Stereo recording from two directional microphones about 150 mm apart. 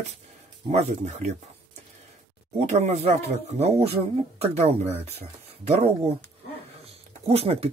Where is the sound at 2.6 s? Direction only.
50° right (ahead or behind).